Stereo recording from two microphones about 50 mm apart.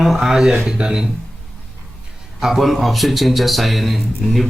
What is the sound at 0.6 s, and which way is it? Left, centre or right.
Speech, centre.